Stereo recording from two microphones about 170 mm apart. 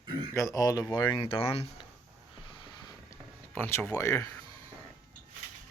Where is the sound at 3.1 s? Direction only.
10° left (ahead or behind).